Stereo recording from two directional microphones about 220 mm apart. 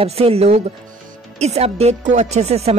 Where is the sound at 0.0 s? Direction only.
25° right (ahead or behind).